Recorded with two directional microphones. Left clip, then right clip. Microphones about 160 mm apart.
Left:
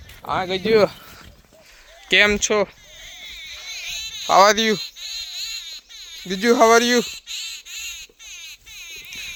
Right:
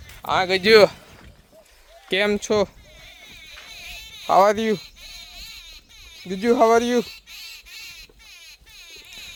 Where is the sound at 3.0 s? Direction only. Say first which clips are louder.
Left 7 dB; 55° right (ahead or behind).